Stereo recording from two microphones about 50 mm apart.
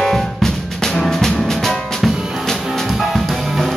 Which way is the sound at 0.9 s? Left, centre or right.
Centre.